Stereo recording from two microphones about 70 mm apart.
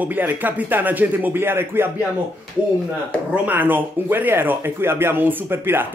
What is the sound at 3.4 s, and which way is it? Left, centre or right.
Speech, right.